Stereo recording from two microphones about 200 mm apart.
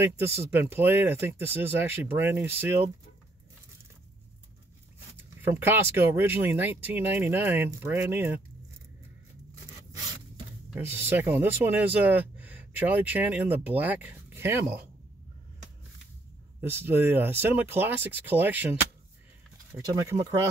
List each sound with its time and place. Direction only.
0.2 s speech: 10° right (ahead or behind)
5.1 s speech: 10° right (ahead or behind)
10.7 s speech: 10° right (ahead or behind)
14.6 s speech: 50° right (ahead or behind)
16.6 s speech: 10° right (ahead or behind)
19.8 s speech: 15° right (ahead or behind)